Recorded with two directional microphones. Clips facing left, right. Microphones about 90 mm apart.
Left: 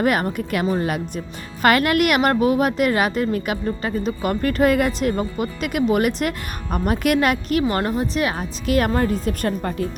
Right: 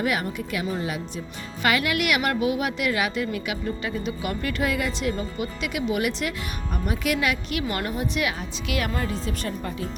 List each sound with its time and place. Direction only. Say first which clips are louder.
0.0 s a woman's voice: left 6 dB; 50° left (ahead or behind)